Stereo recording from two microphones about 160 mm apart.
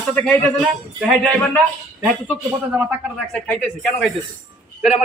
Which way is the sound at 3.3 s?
5° left (ahead or behind).